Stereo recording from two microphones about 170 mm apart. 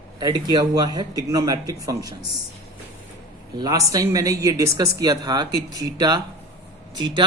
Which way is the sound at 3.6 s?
20° right (ahead or behind).